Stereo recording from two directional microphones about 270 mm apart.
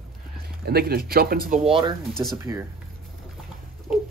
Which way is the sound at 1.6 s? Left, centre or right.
Centre.